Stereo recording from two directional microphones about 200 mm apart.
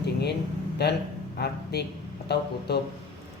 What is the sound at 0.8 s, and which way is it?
Speech, 55° left (ahead or behind).